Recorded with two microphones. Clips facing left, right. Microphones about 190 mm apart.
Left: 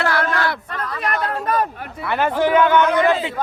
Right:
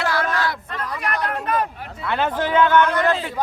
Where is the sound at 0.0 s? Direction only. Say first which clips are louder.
Left 2 dB; 60° left (ahead or behind).